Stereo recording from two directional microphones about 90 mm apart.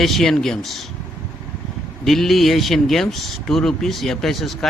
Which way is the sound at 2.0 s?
Centre (ahead or behind).